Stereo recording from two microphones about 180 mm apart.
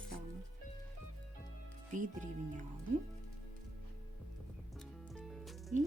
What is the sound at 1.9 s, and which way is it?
Speech, 45° right (ahead or behind).